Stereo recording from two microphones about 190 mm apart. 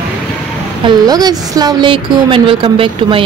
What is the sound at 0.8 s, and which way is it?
A woman's voice, 20° right (ahead or behind).